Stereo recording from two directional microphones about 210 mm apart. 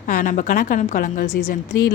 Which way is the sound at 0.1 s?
40° left (ahead or behind).